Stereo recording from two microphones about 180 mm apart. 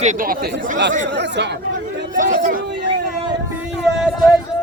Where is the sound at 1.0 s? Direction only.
75° right (ahead or behind).